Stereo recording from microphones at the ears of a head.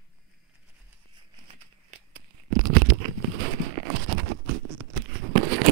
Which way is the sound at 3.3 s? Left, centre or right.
Right.